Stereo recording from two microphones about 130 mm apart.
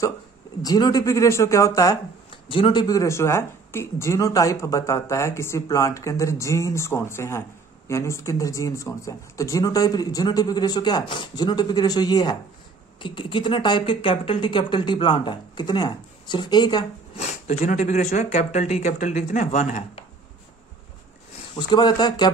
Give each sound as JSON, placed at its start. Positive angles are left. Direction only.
{"t": 0.6, "sound": "speech", "side_deg": 30}
{"t": 2.4, "sound": "speech", "side_deg": 40}
{"t": 17.2, "sound": "speech", "side_deg": 60}
{"t": 21.5, "sound": "speech", "side_deg": 35}